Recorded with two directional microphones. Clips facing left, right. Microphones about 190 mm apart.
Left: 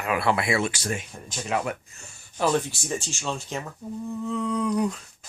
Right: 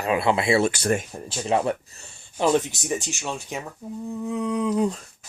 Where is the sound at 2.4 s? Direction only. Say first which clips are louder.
Right 3 dB; 20° right (ahead or behind).